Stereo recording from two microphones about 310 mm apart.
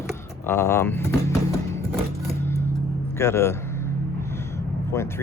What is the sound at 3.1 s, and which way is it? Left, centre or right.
Speech, centre.